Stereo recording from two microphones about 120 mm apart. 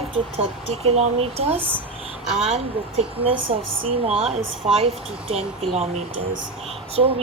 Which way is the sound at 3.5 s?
50° right (ahead or behind).